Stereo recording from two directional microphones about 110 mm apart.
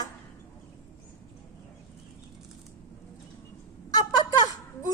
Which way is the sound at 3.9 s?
35° left (ahead or behind).